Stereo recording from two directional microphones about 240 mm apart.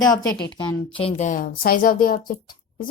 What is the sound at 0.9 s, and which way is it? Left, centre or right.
A woman's voice, left.